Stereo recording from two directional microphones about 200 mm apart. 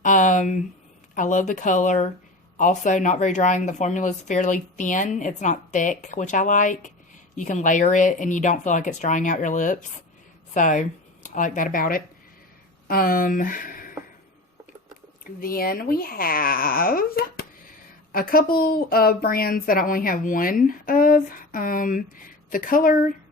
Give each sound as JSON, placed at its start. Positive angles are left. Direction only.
{"t": 0.0, "sound": "a sound", "side_deg": 40}
{"t": 1.1, "sound": "a woman's voice", "side_deg": 40}
{"t": 15.2, "sound": "a woman's voice", "side_deg": 45}